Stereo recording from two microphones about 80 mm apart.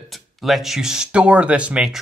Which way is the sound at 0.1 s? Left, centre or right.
Centre.